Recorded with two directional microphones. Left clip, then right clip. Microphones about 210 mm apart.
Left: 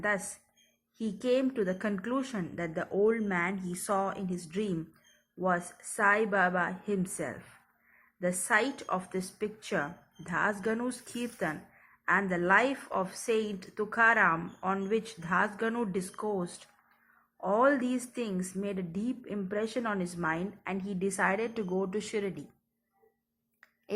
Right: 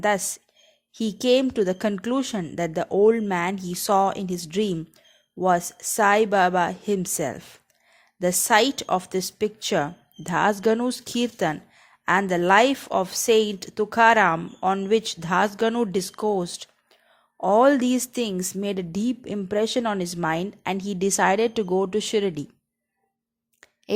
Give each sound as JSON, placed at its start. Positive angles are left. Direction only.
{"t": 0.9, "sound": "a woman's voice", "side_deg": -50}